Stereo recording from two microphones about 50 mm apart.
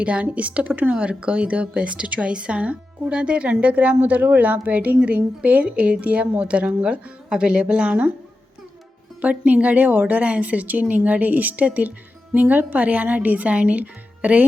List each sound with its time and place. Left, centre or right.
0.0 s a woman's voice: right
0.9 s a woman's voice: right
9.2 s a woman's voice: right